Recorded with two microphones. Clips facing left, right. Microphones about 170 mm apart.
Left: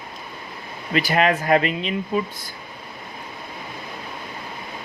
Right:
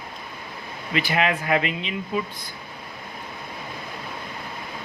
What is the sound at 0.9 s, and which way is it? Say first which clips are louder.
Speech: left 4 dB; 40° left (ahead or behind).